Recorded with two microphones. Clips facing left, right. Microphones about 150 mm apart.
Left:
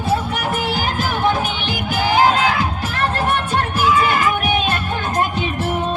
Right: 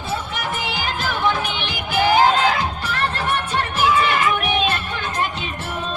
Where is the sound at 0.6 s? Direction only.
50° left (ahead or behind).